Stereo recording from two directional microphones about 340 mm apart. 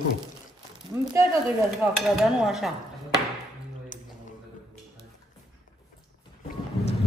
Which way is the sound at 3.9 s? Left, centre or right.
Left.